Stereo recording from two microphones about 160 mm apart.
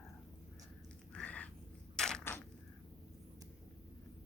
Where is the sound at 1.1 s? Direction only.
10° left (ahead or behind).